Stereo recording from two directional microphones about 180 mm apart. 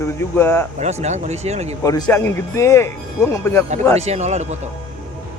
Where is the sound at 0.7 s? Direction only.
40° right (ahead or behind).